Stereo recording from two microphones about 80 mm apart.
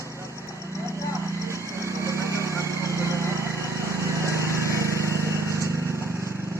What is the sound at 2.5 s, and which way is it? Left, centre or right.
Vehicle, right.